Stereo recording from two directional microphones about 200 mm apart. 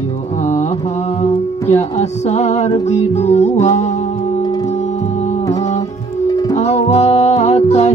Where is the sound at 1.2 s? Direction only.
35° left (ahead or behind).